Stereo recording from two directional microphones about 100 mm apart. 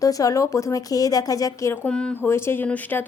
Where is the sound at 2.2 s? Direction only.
25° left (ahead or behind).